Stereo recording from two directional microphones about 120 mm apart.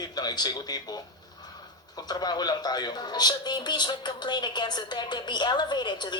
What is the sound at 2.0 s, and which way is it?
Speech, 35° left (ahead or behind).